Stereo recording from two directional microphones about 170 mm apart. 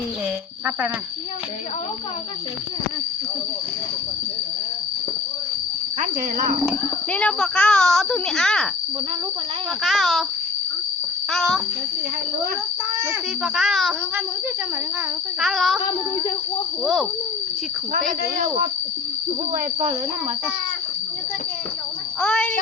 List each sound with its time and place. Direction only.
6.0 s speech: 50° right (ahead or behind)
7.1 s speech: 5° left (ahead or behind)
9.8 s speech: centre (ahead or behind)
11.3 s speech: centre (ahead or behind)
13.4 s speech: centre (ahead or behind)
15.4 s speech: centre (ahead or behind)
16.8 s speech: centre (ahead or behind)
22.2 s speech: 5° left (ahead or behind)